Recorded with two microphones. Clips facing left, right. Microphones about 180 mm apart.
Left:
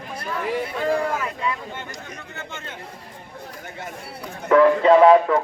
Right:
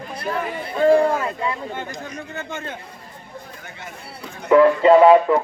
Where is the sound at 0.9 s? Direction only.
30° right (ahead or behind).